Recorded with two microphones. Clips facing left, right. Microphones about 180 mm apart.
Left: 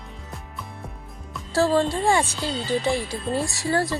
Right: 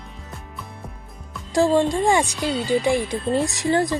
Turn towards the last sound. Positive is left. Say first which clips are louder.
# right 4 dB
turn(degrees=-20)  # may be behind; listen again after turning